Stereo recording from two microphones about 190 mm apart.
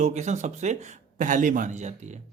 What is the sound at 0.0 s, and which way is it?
Speech, 35° right (ahead or behind).